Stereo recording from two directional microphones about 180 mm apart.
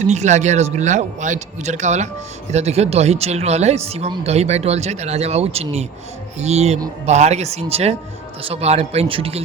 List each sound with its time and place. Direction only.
0.1 s speech: 40° right (ahead or behind)